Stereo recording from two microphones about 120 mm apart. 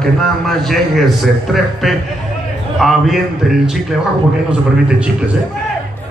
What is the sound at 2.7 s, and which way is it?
Speech, centre (ahead or behind).